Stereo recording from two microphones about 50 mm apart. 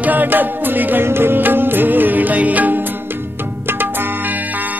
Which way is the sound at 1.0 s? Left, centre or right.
Right.